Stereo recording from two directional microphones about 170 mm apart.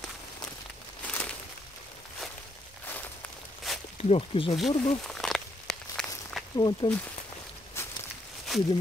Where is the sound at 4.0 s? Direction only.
35° left (ahead or behind).